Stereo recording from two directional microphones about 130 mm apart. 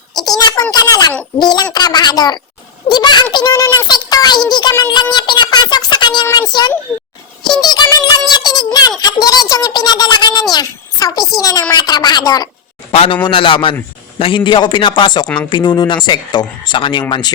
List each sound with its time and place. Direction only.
0.1 s a sound: 30° left (ahead or behind)
1.4 s speech: 35° left (ahead or behind)
4.8 s a sound: 35° left (ahead or behind)
6.5 s speech: 35° left (ahead or behind)
7.6 s music: 30° left (ahead or behind)
8.3 s a sound: 30° left (ahead or behind)
9.2 s speech: 30° left (ahead or behind)
12.9 s a man's voice: 55° left (ahead or behind)
13.2 s speech: 40° left (ahead or behind)